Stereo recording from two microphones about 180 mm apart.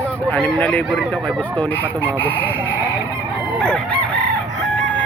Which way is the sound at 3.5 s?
5° left (ahead or behind).